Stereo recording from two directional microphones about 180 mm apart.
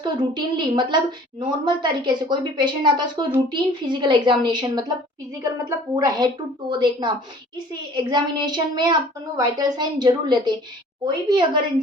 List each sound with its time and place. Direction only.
0.0 s speech: 25° right (ahead or behind)
6.0 s speech: 25° right (ahead or behind)